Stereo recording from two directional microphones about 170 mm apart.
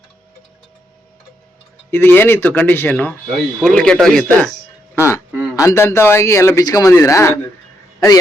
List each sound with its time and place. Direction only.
1.9 s speech: 15° left (ahead or behind)
4.9 s quack: 15° left (ahead or behind)
5.5 s speech: 15° left (ahead or behind)